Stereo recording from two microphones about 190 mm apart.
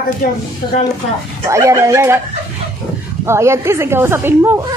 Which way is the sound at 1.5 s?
15° right (ahead or behind).